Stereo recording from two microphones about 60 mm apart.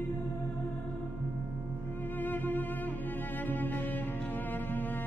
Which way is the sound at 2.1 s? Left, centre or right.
Left.